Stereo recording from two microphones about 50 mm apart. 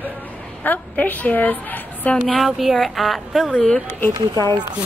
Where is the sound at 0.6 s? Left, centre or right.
Left.